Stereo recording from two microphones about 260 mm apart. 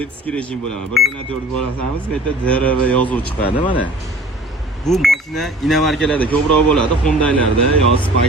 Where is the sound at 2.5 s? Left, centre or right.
Centre.